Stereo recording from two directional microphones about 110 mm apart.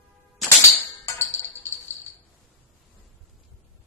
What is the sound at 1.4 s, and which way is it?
Music, 20° left (ahead or behind).